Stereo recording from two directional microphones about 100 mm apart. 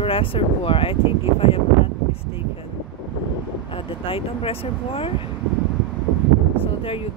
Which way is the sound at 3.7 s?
65° left (ahead or behind).